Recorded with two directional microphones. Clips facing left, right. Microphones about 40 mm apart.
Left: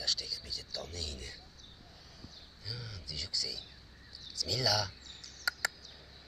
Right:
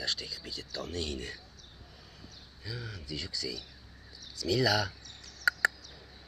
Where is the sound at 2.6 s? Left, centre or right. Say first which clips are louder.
Right 5 dB; right.